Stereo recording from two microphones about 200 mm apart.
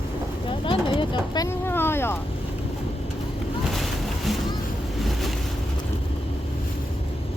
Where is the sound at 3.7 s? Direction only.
Centre (ahead or behind).